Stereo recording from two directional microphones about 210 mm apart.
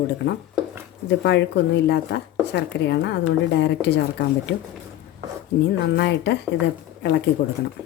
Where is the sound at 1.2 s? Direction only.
55° left (ahead or behind).